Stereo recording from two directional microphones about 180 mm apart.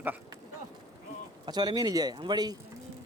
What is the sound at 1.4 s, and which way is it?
Speech, 20° right (ahead or behind).